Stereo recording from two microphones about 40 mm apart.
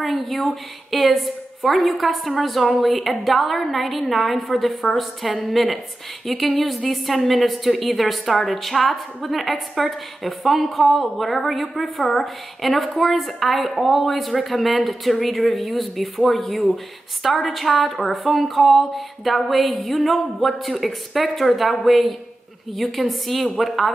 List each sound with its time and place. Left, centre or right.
0.0 s a woman's voice: centre